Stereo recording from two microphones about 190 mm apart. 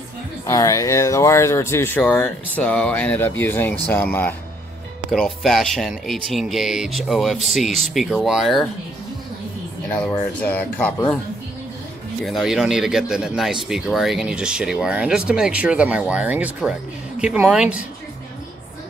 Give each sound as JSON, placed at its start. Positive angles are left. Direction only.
{"t": 0.5, "sound": "speech", "side_deg": 15}
{"t": 9.9, "sound": "speech", "side_deg": 10}
{"t": 12.3, "sound": "speech", "side_deg": 0}